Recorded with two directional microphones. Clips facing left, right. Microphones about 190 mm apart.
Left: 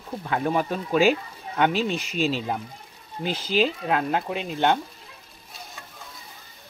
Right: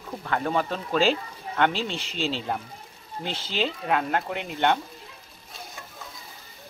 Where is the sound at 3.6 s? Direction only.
10° left (ahead or behind).